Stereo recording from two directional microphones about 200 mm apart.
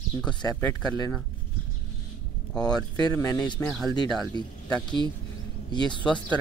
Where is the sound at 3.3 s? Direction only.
20° left (ahead or behind).